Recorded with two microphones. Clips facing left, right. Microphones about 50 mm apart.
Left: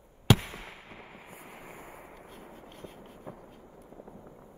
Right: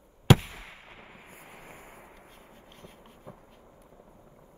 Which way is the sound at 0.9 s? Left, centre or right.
Left.